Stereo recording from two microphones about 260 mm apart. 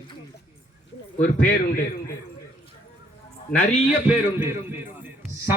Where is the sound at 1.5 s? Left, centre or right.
Left.